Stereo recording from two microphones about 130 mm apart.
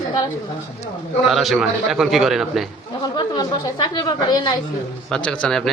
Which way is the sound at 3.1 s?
35° left (ahead or behind).